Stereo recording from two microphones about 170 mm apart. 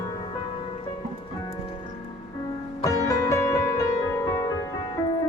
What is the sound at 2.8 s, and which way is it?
Music, 20° left (ahead or behind).